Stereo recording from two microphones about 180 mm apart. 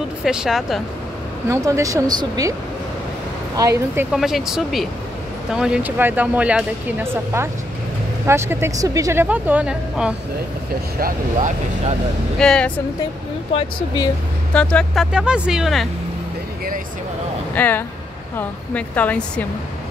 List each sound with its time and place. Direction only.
0.2 s speech: 5° right (ahead or behind)
1.5 s speech: 20° right (ahead or behind)
3.5 s speech: 15° right (ahead or behind)
11.0 s speech: 50° right (ahead or behind)
12.4 s speech: 5° left (ahead or behind)
13.5 s speech: 25° left (ahead or behind)
14.5 s speech: 5° left (ahead or behind)
17.6 s speech: 10° left (ahead or behind)